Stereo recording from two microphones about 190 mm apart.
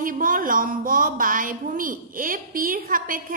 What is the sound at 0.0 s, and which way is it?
A woman's voice, 45° right (ahead or behind).